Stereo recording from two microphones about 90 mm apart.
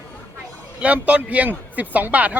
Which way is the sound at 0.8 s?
15° right (ahead or behind).